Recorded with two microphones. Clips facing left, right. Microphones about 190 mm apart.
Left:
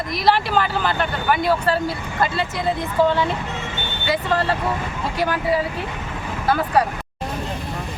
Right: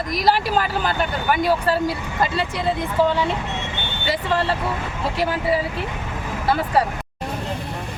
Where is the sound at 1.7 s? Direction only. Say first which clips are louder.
Right 1 dB; 10° right (ahead or behind).